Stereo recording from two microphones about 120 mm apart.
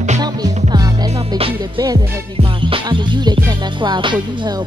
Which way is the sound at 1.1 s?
55° right (ahead or behind).